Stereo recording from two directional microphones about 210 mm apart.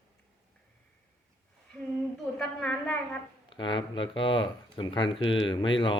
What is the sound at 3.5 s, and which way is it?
Speech, 20° left (ahead or behind).